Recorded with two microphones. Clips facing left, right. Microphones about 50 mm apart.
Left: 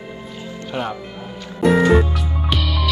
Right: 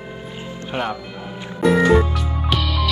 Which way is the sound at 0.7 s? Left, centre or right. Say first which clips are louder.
Right 1 dB; right.